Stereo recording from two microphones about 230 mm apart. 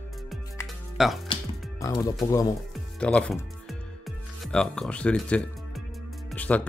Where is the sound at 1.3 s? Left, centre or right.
Centre.